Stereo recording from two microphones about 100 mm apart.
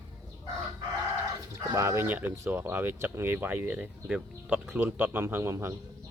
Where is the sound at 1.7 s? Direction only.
30° right (ahead or behind).